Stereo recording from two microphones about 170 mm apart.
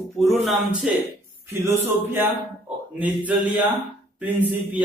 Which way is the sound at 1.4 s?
15° right (ahead or behind).